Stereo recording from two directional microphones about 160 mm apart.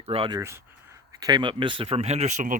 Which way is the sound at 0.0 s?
35° right (ahead or behind).